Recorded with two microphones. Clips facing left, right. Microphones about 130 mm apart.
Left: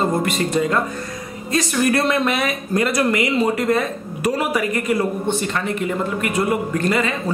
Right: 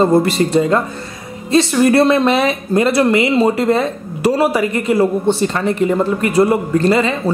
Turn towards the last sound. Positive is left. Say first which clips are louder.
# right 6 dB
turn(degrees=-30)  # may be behind; listen again after turning